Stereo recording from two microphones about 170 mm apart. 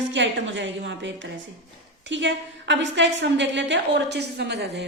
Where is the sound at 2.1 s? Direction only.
90° right.